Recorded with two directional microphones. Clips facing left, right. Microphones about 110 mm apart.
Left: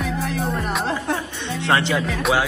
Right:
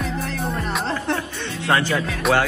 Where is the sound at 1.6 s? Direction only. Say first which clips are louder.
Even; 25° left (ahead or behind).